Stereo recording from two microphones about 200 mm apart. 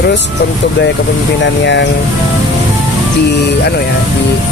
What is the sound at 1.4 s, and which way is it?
Speech, 60° left (ahead or behind).